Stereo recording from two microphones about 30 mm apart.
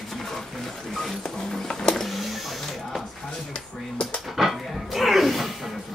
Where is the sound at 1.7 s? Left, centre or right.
Left.